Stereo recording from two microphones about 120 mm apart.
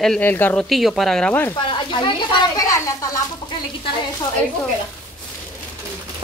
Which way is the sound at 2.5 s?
30° left (ahead or behind).